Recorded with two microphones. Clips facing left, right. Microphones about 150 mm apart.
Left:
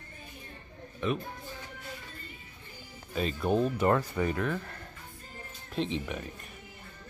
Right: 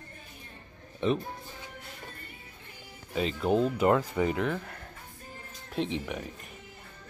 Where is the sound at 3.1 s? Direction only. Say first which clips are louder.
Right 2 dB; 15° right (ahead or behind).